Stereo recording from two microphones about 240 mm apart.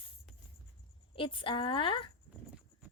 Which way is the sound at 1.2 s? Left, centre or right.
Left.